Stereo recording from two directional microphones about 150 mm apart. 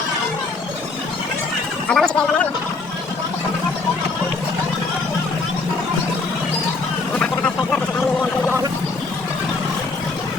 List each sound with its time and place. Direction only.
1.9 s speech: 5° left (ahead or behind)
7.2 s vehicle: 5° left (ahead or behind)